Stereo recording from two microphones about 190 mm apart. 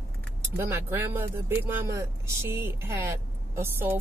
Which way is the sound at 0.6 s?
10° right (ahead or behind).